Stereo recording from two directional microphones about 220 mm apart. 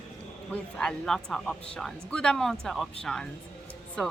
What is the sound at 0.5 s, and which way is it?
A woman's voice, 5° left (ahead or behind).